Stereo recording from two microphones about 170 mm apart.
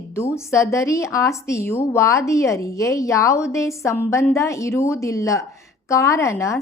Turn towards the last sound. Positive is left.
turn(degrees=15)  # may be behind; listen again after turning